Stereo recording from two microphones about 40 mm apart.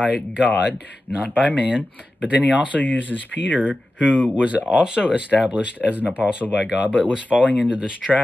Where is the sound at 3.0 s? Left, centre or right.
Right.